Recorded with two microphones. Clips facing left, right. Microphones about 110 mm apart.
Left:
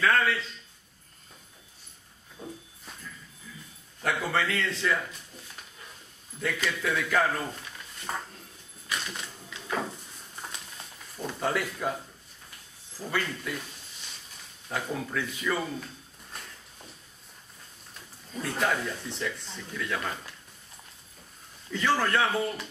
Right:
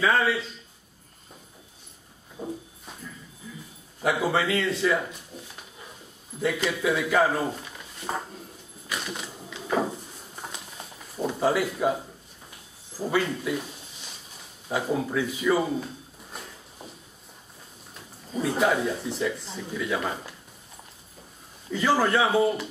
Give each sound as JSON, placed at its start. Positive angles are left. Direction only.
{"t": 0.0, "sound": "a man's voice", "side_deg": -10}
{"t": 2.4, "sound": "a man's voice", "side_deg": -5}
{"t": 4.0, "sound": "a man's voice", "side_deg": -5}
{"t": 6.4, "sound": "a man's voice", "side_deg": -10}
{"t": 7.4, "sound": "drawer open or close", "side_deg": -15}
{"t": 8.8, "sound": "a sound", "side_deg": -10}
{"t": 13.1, "sound": "a man's voice", "side_deg": -10}
{"t": 14.7, "sound": "a man's voice", "side_deg": -10}
{"t": 15.6, "sound": "speech", "side_deg": -20}
{"t": 16.3, "sound": "a sound", "side_deg": -5}
{"t": 18.3, "sound": "a man's voice", "side_deg": -5}
{"t": 21.6, "sound": "a man's voice", "side_deg": -5}